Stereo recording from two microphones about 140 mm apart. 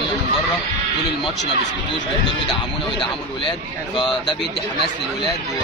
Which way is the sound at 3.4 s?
35° left (ahead or behind).